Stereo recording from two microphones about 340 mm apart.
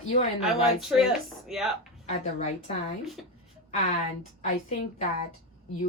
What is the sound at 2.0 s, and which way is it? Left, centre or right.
Speech, centre.